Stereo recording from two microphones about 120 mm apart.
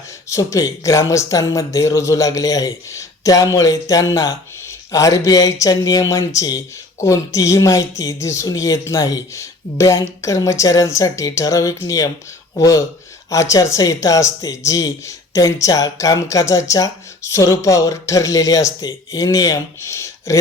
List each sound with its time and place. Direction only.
0.3 s speech: 25° left (ahead or behind)